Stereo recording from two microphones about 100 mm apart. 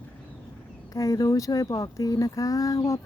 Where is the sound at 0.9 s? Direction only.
35° left (ahead or behind).